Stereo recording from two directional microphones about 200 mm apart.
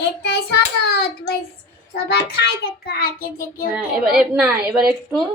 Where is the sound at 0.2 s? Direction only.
55° left (ahead or behind).